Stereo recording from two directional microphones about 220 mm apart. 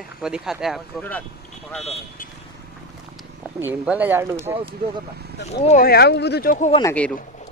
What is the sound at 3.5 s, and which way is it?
Speech, 10° right (ahead or behind).